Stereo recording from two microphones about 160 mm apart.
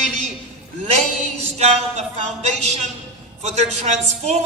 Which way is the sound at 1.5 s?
40° right (ahead or behind).